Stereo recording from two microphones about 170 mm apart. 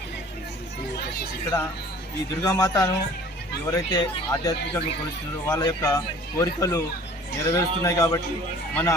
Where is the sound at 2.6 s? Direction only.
20° left (ahead or behind).